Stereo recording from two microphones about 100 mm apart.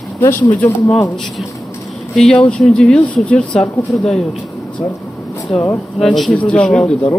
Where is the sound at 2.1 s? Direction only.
10° left (ahead or behind).